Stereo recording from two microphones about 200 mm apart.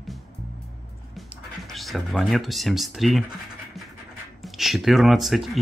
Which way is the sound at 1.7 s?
Centre (ahead or behind).